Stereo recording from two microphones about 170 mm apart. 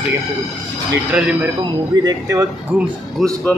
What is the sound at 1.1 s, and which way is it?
Speech, 5° right (ahead or behind).